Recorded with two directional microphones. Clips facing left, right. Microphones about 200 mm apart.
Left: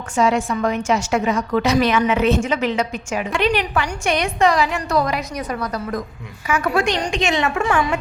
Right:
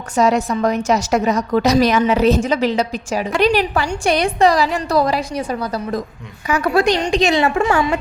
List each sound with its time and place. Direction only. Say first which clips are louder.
0.2 s a woman's voice: right 2 dB; 40° right (ahead or behind)